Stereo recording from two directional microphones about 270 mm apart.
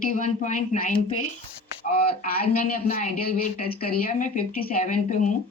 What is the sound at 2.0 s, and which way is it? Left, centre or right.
Speech, left.